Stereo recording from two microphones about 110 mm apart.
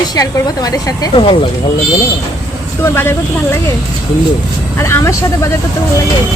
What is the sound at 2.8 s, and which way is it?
Speech, 20° left (ahead or behind).